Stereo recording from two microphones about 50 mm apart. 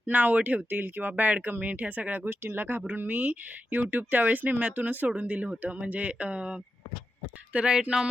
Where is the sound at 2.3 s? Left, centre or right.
Right.